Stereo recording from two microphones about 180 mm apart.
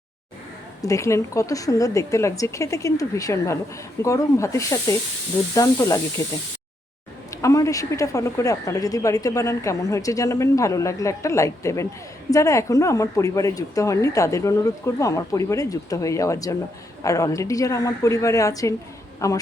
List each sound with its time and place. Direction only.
0.8 s speech: 15° left (ahead or behind)
7.4 s speech: 15° left (ahead or behind)